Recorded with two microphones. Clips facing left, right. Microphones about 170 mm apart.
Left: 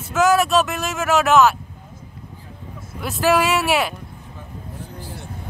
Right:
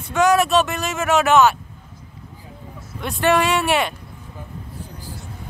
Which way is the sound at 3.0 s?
Centre (ahead or behind).